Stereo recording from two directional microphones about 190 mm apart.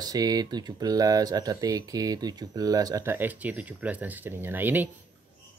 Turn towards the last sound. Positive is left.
turn(degrees=-10)  # may be behind; listen again after turning